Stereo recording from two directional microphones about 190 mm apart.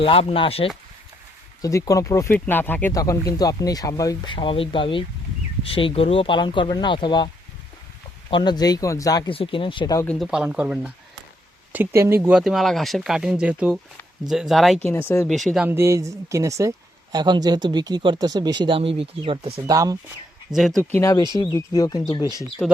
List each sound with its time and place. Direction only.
0.0 s speech: 30° left (ahead or behind)
1.6 s speech: 15° left (ahead or behind)
8.3 s speech: 25° left (ahead or behind)
10.1 s speech: centre (ahead or behind)
12.4 s speech: centre (ahead or behind)
15.3 s speech: centre (ahead or behind); by 19.7 s 30° right (ahead or behind)
19.7 s speech: 20° right (ahead or behind)
20.5 s speech: centre (ahead or behind)
20.9 s speech: 15° left (ahead or behind)